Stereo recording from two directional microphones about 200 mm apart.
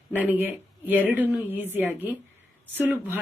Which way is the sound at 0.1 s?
10° right (ahead or behind).